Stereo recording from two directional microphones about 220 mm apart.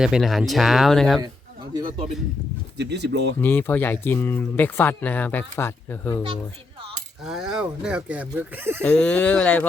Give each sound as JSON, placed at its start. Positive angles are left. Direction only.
{"t": 0.0, "sound": "speech", "side_deg": 0}
{"t": 1.7, "sound": "a man's voice", "side_deg": -20}
{"t": 2.7, "sound": "speech", "side_deg": -50}
{"t": 3.4, "sound": "speech", "side_deg": 10}
{"t": 7.3, "sound": "speech", "side_deg": 0}
{"t": 8.8, "sound": "speech", "side_deg": 5}